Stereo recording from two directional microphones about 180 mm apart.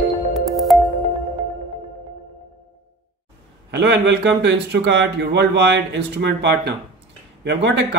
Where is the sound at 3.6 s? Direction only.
70° right (ahead or behind).